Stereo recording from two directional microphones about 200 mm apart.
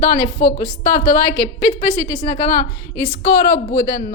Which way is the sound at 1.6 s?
25° left (ahead or behind).